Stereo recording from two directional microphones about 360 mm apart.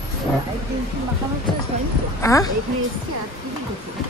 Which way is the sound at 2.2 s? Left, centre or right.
Centre.